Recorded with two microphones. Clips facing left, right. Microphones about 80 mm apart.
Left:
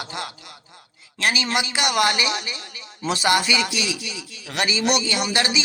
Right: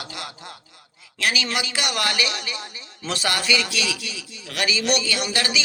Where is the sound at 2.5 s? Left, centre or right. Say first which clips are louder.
Right 2 dB; right.